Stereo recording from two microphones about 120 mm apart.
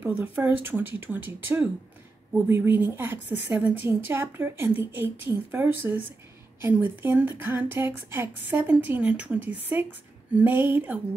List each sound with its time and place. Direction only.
0.0 s a woman's voice: 15° right (ahead or behind)